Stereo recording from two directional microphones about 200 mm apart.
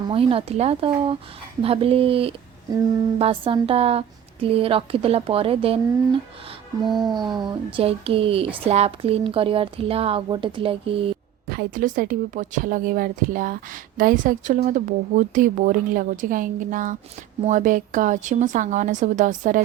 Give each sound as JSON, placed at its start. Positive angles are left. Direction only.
{"t": 0.1, "sound": "speech", "side_deg": -25}
{"t": 7.2, "sound": "speech", "side_deg": -20}
{"t": 11.4, "sound": "a woman's voice", "side_deg": -50}